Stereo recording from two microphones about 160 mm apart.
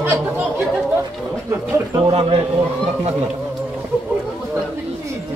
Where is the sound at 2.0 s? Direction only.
35° right (ahead or behind).